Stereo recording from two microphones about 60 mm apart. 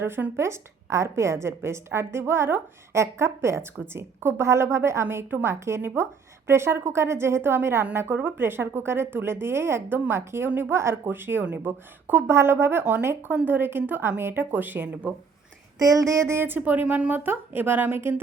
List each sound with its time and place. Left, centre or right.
0.0 s a woman's voice: right
15.8 s a woman's voice: right